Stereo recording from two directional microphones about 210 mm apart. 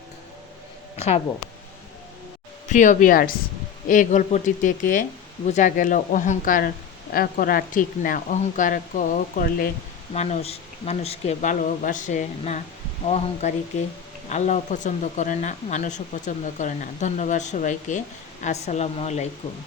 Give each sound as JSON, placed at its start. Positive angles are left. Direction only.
{"t": 0.9, "sound": "a sound", "side_deg": 30}
{"t": 2.6, "sound": "speech", "side_deg": 35}
{"t": 10.2, "sound": "speech", "side_deg": 30}